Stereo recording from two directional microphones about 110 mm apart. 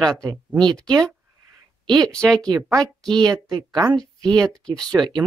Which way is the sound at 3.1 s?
40° right (ahead or behind).